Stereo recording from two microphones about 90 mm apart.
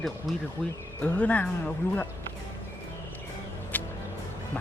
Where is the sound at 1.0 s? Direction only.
15° left (ahead or behind).